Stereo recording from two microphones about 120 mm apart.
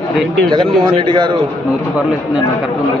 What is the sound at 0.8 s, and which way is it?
Speech, 40° right (ahead or behind).